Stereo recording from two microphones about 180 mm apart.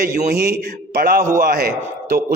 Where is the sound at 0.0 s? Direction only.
50° right (ahead or behind).